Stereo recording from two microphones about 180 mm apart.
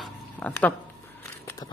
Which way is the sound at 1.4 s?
15° left (ahead or behind).